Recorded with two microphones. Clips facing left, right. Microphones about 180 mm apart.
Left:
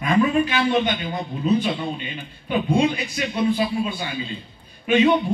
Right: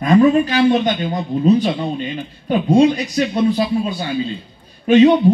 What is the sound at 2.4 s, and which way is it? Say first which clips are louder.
Speech: right 7 dB; 40° right (ahead or behind).